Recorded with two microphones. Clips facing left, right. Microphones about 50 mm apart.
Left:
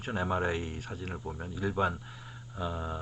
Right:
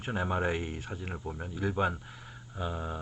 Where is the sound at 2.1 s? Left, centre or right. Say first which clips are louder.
Even; centre.